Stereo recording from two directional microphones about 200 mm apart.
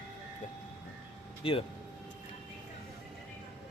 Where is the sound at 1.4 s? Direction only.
25° left (ahead or behind).